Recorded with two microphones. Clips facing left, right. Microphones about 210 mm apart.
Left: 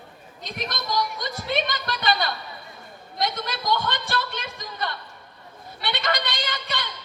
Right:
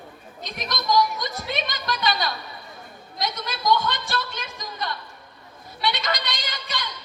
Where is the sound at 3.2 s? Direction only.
55° left (ahead or behind).